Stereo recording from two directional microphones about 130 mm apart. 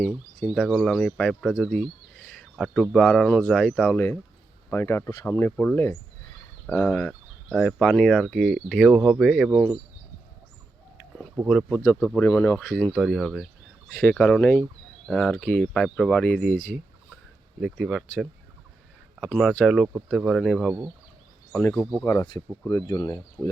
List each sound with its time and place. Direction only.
0.0 s speech: centre (ahead or behind)
3.9 s speech: 15° left (ahead or behind); by 9.6 s 5° right (ahead or behind)
11.8 s speech: 20° left (ahead or behind)
12.9 s speech: centre (ahead or behind); by 16.7 s 15° left (ahead or behind)
17.6 s speech: 5° right (ahead or behind)
19.2 s speech: centre (ahead or behind)
21.6 s speech: 10° left (ahead or behind)
22.9 s speech: 30° left (ahead or behind)